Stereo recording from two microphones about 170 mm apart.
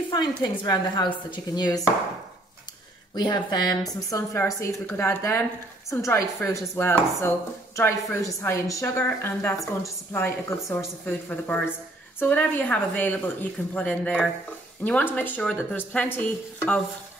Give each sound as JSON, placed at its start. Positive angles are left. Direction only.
{"t": 0.4, "sound": "speech", "side_deg": 25}
{"t": 3.2, "sound": "speech", "side_deg": 25}